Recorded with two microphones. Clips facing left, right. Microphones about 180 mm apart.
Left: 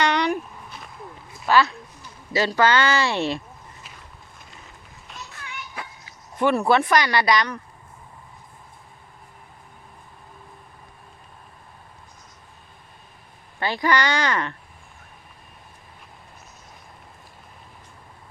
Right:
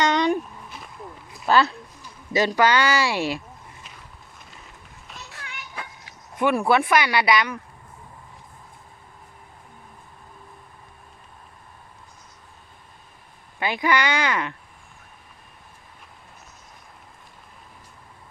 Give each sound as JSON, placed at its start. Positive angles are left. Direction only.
{"t": 0.0, "sound": "a sound", "side_deg": -20}
{"t": 1.5, "sound": "speech", "side_deg": -30}
{"t": 2.0, "sound": "speech", "side_deg": -15}
{"t": 6.4, "sound": "speech", "side_deg": -10}
{"t": 13.6, "sound": "speech", "side_deg": -15}